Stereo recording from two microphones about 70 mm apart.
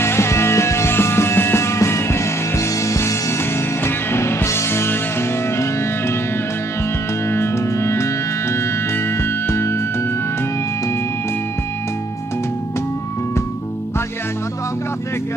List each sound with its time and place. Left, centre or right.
0.0 s music: left
7.2 s music: left
9.5 s music: left